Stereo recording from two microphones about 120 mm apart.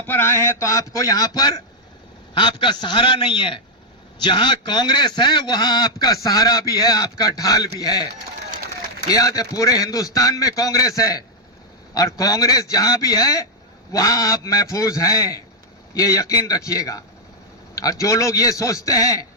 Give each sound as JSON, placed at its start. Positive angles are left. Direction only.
{"t": 0.1, "sound": "a man's voice", "side_deg": 20}
{"t": 9.0, "sound": "a man's voice", "side_deg": 30}